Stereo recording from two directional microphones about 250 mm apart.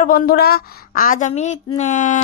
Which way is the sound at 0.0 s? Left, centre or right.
Left.